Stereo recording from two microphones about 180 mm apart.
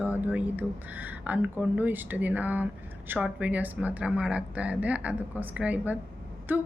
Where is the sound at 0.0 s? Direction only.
10° right (ahead or behind).